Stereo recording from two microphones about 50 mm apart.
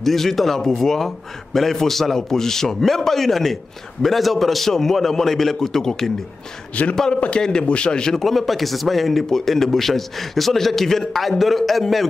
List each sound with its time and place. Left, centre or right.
0.0 s a man's voice: centre
6.7 s a man's voice: left
8.2 s speech: centre